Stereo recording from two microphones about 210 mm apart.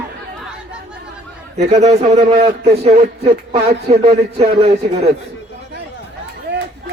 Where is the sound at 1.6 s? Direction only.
30° right (ahead or behind).